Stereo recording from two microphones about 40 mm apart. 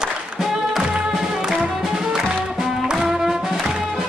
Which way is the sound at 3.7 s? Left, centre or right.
Right.